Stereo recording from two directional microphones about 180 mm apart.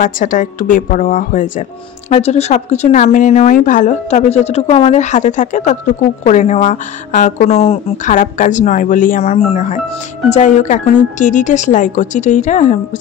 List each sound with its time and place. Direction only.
0.0 s speech: 45° left (ahead or behind)
8.1 s speech: 45° left (ahead or behind)